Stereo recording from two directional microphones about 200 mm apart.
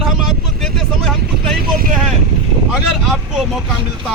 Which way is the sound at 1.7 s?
45° right (ahead or behind).